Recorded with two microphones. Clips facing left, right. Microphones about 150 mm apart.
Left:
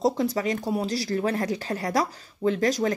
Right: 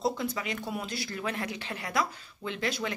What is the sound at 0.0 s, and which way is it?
Speech, 40° left (ahead or behind).